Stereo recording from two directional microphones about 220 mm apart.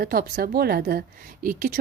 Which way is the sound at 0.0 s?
40° right (ahead or behind).